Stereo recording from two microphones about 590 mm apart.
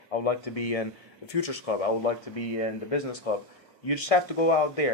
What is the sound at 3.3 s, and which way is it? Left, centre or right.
Speech, left.